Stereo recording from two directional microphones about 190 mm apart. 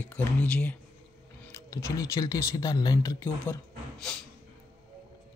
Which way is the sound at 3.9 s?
5° left (ahead or behind).